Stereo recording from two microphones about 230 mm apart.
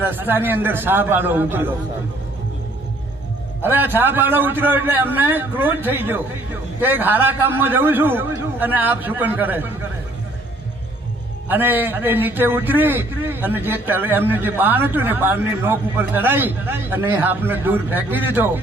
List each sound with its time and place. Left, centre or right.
0.0 s a man's voice: centre
3.6 s a man's voice: centre
11.4 s a man's voice: centre